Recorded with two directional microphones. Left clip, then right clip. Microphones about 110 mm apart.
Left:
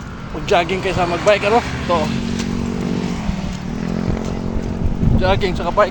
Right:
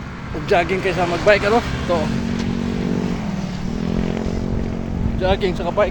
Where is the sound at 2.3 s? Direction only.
65° left (ahead or behind).